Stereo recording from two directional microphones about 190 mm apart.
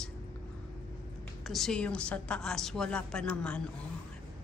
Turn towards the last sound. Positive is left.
turn(degrees=5)  # may be behind; listen again after turning